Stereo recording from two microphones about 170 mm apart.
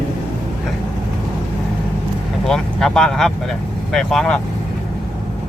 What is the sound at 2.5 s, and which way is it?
Speech, 5° left (ahead or behind).